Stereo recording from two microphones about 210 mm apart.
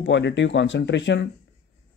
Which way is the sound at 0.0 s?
60° left (ahead or behind).